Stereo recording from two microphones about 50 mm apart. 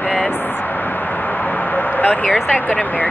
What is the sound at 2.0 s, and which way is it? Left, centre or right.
Speech, left.